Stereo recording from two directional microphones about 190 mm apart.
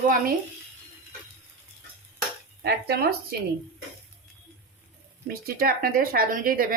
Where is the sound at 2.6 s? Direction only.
60° right (ahead or behind).